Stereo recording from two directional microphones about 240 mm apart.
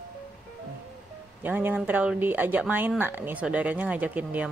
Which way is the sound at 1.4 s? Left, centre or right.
Centre.